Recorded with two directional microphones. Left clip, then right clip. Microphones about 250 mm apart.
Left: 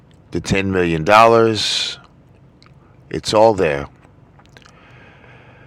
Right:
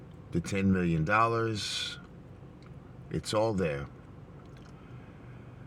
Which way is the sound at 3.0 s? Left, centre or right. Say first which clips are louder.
Left 17 dB; left.